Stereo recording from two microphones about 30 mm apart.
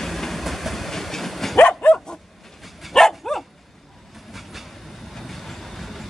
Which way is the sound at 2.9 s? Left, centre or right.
Centre.